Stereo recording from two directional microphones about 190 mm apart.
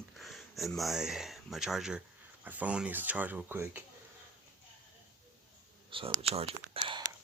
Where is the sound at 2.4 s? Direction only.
10° right (ahead or behind).